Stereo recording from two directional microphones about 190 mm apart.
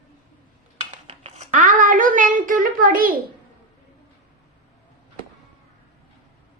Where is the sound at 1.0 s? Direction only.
35° right (ahead or behind).